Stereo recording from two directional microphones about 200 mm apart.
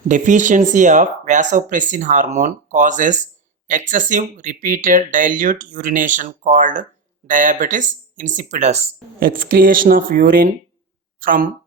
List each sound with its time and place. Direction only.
0.1 s speech: 40° right (ahead or behind)